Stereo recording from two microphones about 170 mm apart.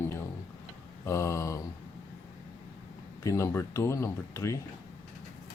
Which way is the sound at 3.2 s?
15° left (ahead or behind).